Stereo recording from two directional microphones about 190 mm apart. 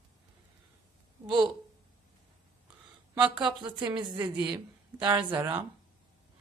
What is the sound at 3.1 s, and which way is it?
Speech, 20° right (ahead or behind).